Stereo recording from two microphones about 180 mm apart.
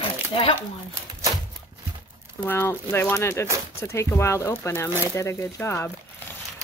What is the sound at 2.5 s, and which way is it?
Speech, 10° left (ahead or behind).